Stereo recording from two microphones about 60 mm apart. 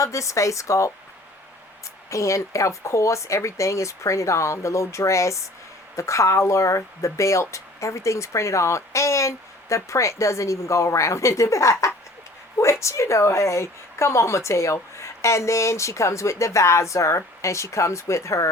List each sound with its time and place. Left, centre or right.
0.0 s speech: left
2.0 s speech: left